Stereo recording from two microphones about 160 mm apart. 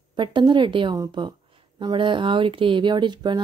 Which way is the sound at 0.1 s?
30° right (ahead or behind).